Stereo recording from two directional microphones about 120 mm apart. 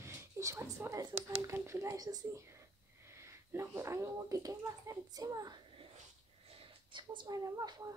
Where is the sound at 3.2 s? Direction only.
20° right (ahead or behind).